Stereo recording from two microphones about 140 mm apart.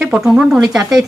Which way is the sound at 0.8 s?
25° right (ahead or behind).